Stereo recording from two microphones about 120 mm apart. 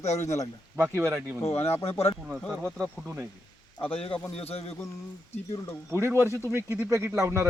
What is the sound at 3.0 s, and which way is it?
Speech, 20° right (ahead or behind).